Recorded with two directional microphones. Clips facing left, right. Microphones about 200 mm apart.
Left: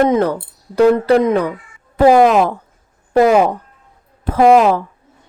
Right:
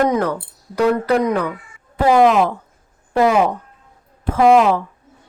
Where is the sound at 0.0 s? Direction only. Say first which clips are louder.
Left 4 dB; 25° left (ahead or behind).